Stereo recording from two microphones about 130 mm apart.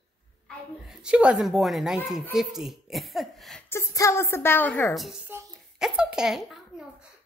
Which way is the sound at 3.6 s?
20° left (ahead or behind).